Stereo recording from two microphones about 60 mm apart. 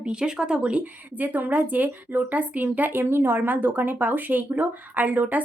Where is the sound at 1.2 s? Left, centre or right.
Right.